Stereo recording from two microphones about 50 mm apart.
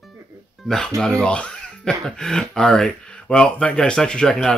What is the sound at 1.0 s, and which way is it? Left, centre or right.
Speech, centre.